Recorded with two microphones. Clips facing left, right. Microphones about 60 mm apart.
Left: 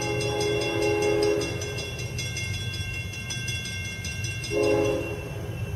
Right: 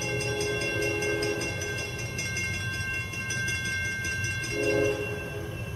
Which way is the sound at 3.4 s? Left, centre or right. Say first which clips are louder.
Right 5 dB; right.